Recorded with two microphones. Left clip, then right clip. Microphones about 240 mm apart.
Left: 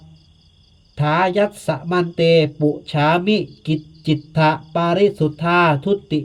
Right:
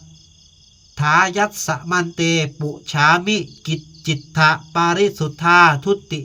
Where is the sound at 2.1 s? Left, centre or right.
Right.